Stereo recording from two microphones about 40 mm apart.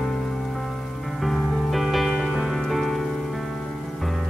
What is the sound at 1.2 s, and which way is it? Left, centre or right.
Music, centre.